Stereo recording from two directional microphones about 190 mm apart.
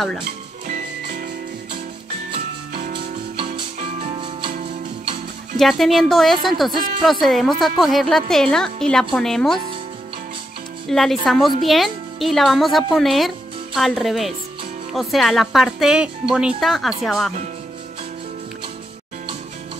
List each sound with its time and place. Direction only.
0.7 s music: 45° right (ahead or behind)
2.9 s music: 25° right (ahead or behind)
5.6 s a woman's voice: centre (ahead or behind)
10.9 s a woman's voice: centre (ahead or behind)